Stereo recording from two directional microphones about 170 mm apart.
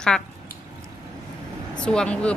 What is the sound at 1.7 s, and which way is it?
Speech, 5° left (ahead or behind).